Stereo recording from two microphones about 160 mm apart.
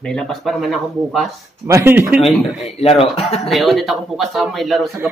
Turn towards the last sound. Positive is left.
turn(degrees=0)  # may be behind; listen again after turning